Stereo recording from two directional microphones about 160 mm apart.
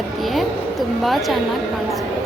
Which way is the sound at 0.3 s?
Centre (ahead or behind).